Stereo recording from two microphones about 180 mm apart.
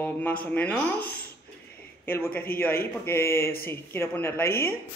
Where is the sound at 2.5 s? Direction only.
55° left (ahead or behind).